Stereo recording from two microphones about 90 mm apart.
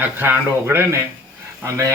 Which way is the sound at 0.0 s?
20° right (ahead or behind).